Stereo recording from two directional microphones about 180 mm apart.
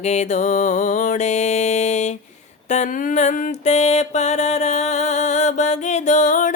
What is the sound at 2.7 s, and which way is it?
Mantra, 45° left (ahead or behind).